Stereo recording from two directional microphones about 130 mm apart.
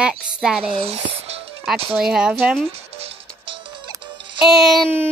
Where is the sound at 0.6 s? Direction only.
45° right (ahead or behind).